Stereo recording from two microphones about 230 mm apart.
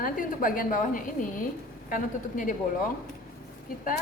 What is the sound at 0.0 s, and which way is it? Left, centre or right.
A woman's voice, left.